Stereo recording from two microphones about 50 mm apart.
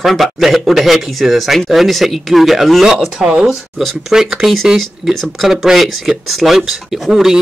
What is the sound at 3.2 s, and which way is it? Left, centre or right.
Speech, centre.